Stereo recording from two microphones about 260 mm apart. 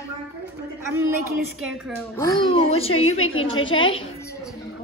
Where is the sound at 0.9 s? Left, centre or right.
Centre.